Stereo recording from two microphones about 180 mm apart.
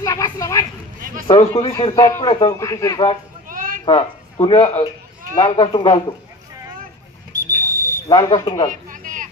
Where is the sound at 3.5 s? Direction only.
50° right (ahead or behind).